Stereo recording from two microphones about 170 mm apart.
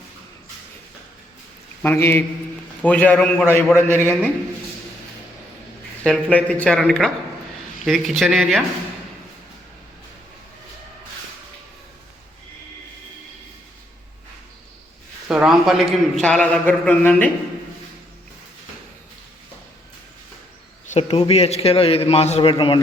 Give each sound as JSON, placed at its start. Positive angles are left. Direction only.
{"t": 1.8, "sound": "a man's voice", "side_deg": 15}
{"t": 6.0, "sound": "speech", "side_deg": 5}
{"t": 15.3, "sound": "a man's voice", "side_deg": -5}
{"t": 20.8, "sound": "a man's voice", "side_deg": 40}